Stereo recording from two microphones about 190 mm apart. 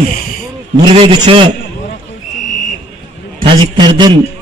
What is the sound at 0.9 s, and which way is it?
Speech, 25° right (ahead or behind).